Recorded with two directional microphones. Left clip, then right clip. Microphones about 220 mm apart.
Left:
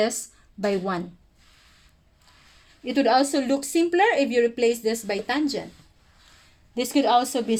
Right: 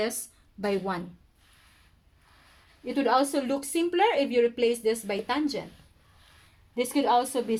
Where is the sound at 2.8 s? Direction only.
45° left (ahead or behind).